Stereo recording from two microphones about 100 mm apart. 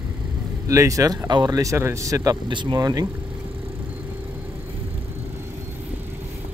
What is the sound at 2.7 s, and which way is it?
Speech, 40° right (ahead or behind).